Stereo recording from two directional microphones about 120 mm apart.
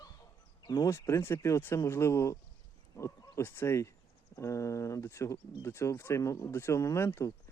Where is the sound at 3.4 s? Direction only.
20° left (ahead or behind).